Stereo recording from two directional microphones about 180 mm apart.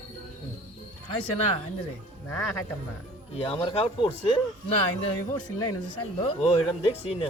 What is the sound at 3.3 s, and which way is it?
Speech, 30° left (ahead or behind).